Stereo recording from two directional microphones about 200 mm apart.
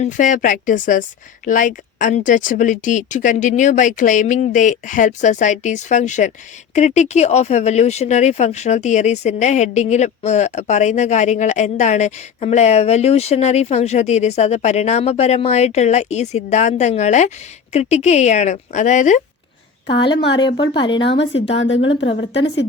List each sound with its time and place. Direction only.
0.0 s speech: 40° left (ahead or behind)
21.0 s a woman's voice: 65° left (ahead or behind)